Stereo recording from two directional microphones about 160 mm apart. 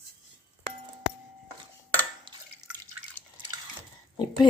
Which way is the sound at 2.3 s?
30° right (ahead or behind).